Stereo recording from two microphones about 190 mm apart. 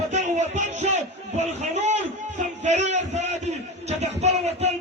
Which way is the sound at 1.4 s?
35° right (ahead or behind).